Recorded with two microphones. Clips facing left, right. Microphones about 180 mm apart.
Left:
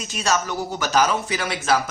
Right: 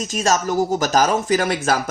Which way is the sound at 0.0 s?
40° right (ahead or behind).